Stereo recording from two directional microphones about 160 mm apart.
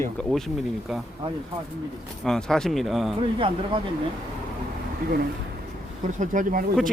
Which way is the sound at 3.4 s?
30° right (ahead or behind).